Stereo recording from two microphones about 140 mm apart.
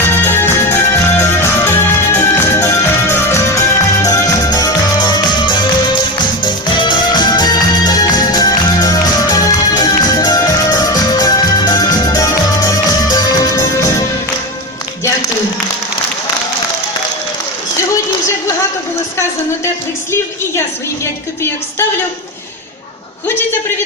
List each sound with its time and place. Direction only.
0.3 s music: 15° left (ahead or behind)